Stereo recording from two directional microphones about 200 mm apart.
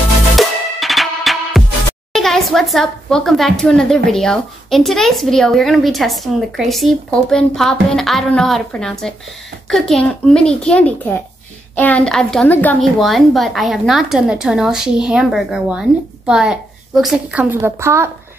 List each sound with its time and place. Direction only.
0.4 s music: centre (ahead or behind)
2.1 s speech: centre (ahead or behind)